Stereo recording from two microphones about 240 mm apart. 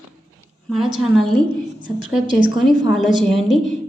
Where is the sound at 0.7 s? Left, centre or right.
Centre.